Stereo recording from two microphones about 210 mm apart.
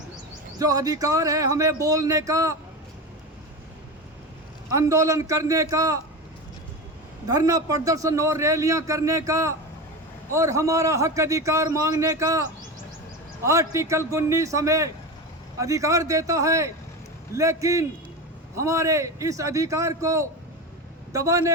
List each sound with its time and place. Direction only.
0.6 s a man's voice: 15° right (ahead or behind)
4.7 s a man's voice: 15° right (ahead or behind)
7.3 s a man's voice: 15° right (ahead or behind)